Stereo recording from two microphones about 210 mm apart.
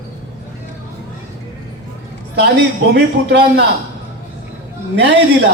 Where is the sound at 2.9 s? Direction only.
55° right (ahead or behind).